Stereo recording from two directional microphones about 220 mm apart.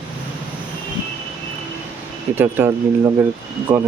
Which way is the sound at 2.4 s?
10° right (ahead or behind).